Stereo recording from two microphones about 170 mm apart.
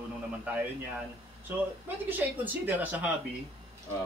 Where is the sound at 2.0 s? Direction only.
10° right (ahead or behind).